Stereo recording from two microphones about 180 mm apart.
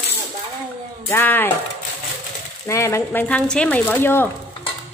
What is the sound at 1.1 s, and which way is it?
Speech, 10° left (ahead or behind).